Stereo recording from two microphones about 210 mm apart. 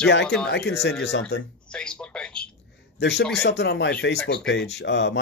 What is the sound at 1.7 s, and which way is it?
Speech, 5° left (ahead or behind).